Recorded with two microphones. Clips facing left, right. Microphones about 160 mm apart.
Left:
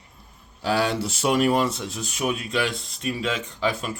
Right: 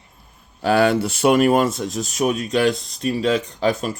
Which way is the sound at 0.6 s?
55° right (ahead or behind).